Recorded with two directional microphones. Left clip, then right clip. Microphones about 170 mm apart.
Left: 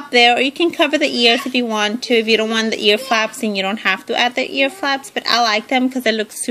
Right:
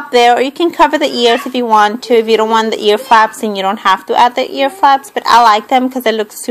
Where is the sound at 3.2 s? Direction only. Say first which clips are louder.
Right 8 dB; 55° left (ahead or behind).